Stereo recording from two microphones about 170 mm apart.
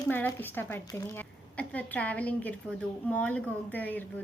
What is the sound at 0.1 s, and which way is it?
A woman's voice, 10° left (ahead or behind).